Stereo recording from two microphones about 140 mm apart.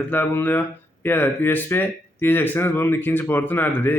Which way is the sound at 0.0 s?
15° left (ahead or behind).